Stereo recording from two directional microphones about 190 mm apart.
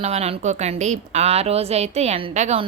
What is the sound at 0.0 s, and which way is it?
Speech, 35° right (ahead or behind).